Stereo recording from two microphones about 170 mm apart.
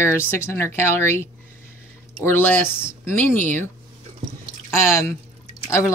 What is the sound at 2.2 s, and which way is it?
Speech, 10° left (ahead or behind).